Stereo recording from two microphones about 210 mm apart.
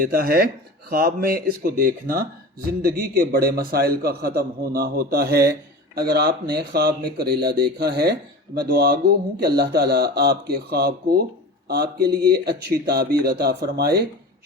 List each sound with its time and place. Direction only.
0.0 s speech: 45° right (ahead or behind)